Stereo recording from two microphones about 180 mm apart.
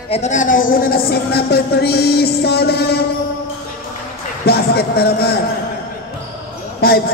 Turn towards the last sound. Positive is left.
turn(degrees=60)  # may be behind; listen again after turning